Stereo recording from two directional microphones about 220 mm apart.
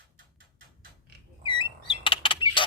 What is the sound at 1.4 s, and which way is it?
Bird, 20° left (ahead or behind).